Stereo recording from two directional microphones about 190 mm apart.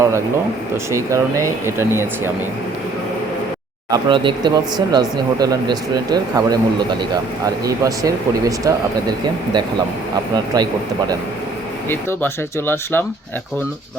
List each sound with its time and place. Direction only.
0.9 s speech: 15° right (ahead or behind)
3.9 s speech: 25° right (ahead or behind)
11.9 s speech: 10° left (ahead or behind)